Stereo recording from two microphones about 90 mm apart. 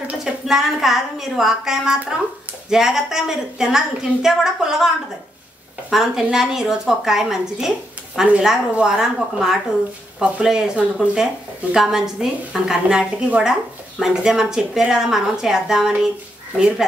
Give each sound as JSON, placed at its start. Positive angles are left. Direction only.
{"t": 0.0, "sound": "a woman's voice", "side_deg": -10}